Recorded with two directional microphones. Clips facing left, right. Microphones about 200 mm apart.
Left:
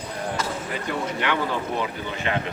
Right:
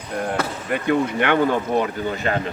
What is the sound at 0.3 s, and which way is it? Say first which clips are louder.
Speech: right 4 dB; 60° right (ahead or behind).